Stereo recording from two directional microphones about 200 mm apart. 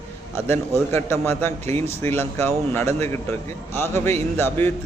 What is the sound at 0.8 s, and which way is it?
A man's voice, 15° left (ahead or behind).